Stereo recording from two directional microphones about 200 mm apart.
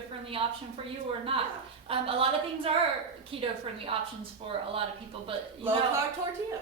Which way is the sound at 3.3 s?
30° right (ahead or behind).